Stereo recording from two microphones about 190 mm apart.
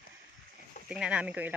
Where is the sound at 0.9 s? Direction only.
5° right (ahead or behind).